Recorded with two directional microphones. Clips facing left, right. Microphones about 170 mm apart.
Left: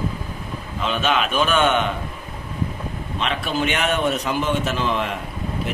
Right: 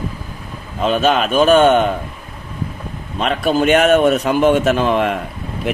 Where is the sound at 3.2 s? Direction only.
45° right (ahead or behind).